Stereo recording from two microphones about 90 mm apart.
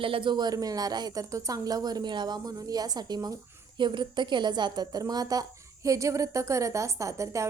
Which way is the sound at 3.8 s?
60° right (ahead or behind).